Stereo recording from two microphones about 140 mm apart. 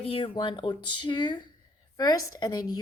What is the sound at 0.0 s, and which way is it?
A woman's voice, 40° left (ahead or behind).